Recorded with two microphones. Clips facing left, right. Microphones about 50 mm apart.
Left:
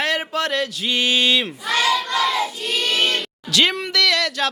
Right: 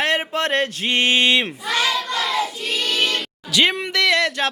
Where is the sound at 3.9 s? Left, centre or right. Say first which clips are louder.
Right 2 dB; right.